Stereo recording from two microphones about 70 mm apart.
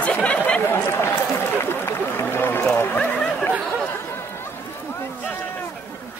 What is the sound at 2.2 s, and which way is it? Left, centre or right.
Run, left.